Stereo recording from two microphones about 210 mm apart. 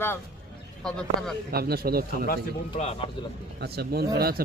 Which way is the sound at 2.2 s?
40° left (ahead or behind).